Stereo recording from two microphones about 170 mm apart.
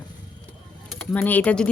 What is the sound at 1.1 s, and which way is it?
Speech, 10° left (ahead or behind).